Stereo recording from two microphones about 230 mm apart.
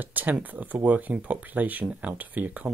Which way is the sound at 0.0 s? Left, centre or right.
Centre.